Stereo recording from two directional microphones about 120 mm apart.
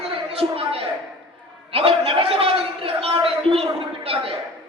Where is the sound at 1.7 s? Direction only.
50° right (ahead or behind).